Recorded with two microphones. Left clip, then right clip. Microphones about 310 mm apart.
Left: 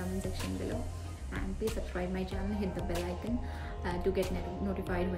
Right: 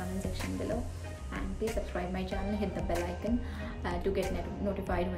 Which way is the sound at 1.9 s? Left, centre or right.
Centre.